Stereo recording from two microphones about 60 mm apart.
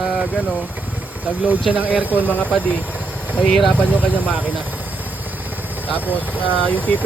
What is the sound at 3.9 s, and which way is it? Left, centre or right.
Speech, right.